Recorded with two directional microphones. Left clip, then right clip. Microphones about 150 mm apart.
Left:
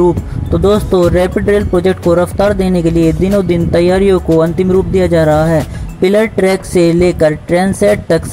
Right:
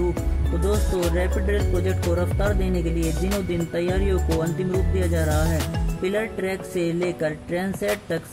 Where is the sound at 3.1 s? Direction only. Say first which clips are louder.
Left 14 dB; centre (ahead or behind).